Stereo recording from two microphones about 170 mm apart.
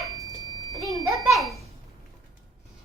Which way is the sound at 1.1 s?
Centre (ahead or behind).